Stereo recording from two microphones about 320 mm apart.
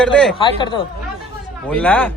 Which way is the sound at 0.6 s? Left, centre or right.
Centre.